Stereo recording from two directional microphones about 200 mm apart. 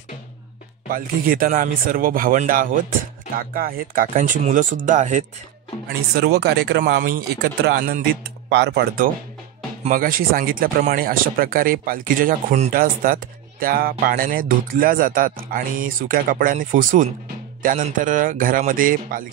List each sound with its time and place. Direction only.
0.9 s speech: 45° right (ahead or behind)
6.1 s speech: 50° right (ahead or behind)